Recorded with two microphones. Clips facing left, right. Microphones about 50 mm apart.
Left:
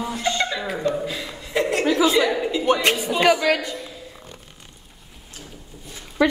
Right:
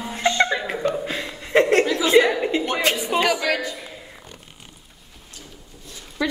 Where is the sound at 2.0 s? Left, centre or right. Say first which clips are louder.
Right 4 dB; right.